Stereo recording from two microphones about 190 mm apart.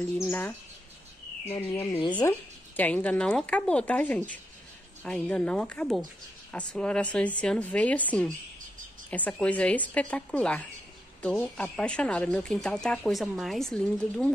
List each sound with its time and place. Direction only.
0.2 s speech: 10° left (ahead or behind)
1.9 s speech: 25° left (ahead or behind)
2.1 s speech: 10° left (ahead or behind)